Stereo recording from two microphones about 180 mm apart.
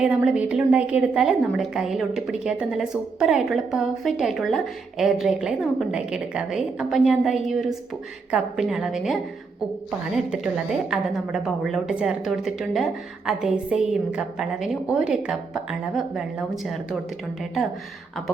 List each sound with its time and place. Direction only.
0.0 s a woman's voice: 5° right (ahead or behind)
10.3 s a woman's voice: 5° right (ahead or behind)